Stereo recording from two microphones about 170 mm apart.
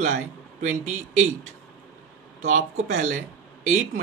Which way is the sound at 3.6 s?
45° right (ahead or behind).